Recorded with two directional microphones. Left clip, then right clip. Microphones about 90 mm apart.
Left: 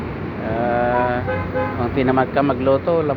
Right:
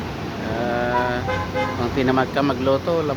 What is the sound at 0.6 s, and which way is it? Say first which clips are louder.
Sheep: left 3 dB; 20° right (ahead or behind).